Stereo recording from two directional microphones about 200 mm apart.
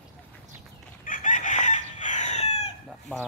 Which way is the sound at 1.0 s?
40° left (ahead or behind).